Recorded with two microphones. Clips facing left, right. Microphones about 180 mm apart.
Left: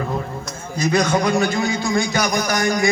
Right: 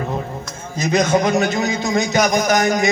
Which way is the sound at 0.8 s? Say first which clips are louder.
Right 2 dB; 20° right (ahead or behind).